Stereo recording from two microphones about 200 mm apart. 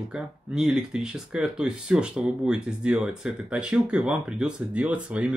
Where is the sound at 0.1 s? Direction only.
Centre (ahead or behind).